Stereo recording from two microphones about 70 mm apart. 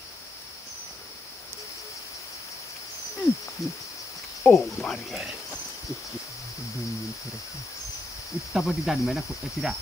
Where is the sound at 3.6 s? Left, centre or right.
Left.